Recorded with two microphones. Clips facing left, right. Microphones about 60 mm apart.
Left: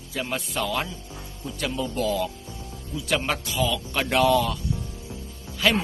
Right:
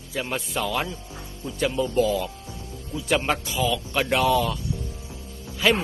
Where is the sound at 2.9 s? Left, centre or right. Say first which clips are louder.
Right 1 dB; right.